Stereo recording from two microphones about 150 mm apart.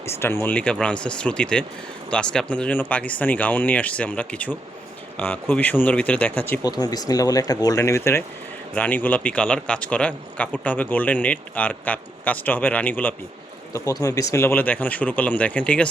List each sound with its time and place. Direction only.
0.0 s a man's voice: 15° left (ahead or behind)
6.6 s a man's voice: 25° left (ahead or behind)
13.7 s a man's voice: 20° left (ahead or behind)